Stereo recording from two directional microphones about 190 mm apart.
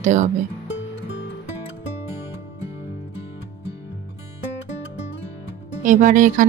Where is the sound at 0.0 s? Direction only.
40° right (ahead or behind).